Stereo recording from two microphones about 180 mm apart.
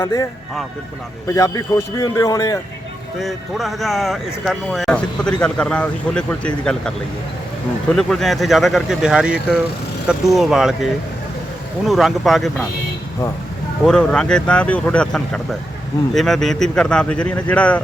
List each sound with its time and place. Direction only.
0.0 s a man's voice: 20° left (ahead or behind)
1.3 s a man's voice: 20° left (ahead or behind)
3.2 s speech: centre (ahead or behind)
7.9 s speech: centre (ahead or behind)
11.9 s speech: centre (ahead or behind)
13.8 s speech: 5° left (ahead or behind)